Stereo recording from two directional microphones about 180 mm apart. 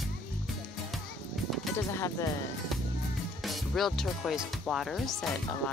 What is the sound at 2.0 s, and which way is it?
Speech, 15° left (ahead or behind).